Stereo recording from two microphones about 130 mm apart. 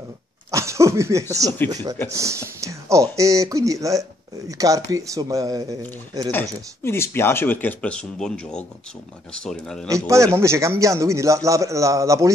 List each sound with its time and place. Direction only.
0.5 s a sound: 25° right (ahead or behind)
1.7 s a man's voice: 30° right (ahead or behind)
6.8 s speech: 20° left (ahead or behind)
9.8 s a man's voice: 25° right (ahead or behind)